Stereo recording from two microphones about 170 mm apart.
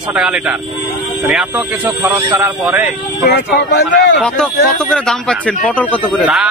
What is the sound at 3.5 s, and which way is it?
Speech, 75° left (ahead or behind).